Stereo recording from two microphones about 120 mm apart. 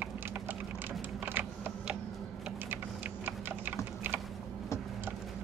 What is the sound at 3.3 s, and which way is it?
Typing, 15° right (ahead or behind).